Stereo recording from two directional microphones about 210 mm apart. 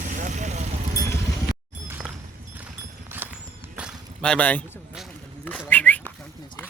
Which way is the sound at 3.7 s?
Centre (ahead or behind).